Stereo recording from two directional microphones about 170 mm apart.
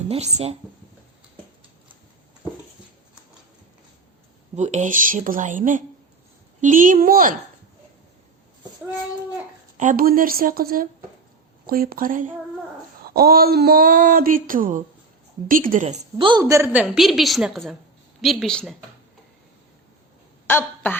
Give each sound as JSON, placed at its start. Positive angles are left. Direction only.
{"t": 0.1, "sound": "speech", "side_deg": -40}
{"t": 4.5, "sound": "speech", "side_deg": -45}
{"t": 9.7, "sound": "speech", "side_deg": -50}
{"t": 16.4, "sound": "a woman's voice", "side_deg": -15}
{"t": 16.8, "sound": "a woman's voice", "side_deg": 0}
{"t": 20.5, "sound": "speech", "side_deg": 10}